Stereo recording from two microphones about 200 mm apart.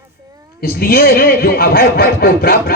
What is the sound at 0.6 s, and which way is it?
Speech, 50° left (ahead or behind).